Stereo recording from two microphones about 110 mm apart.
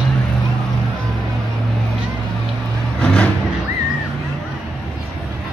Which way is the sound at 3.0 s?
10° left (ahead or behind).